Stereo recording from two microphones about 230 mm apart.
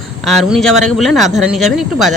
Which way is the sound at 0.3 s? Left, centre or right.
Centre.